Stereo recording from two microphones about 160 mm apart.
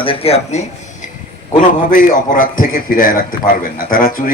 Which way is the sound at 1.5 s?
60° left (ahead or behind).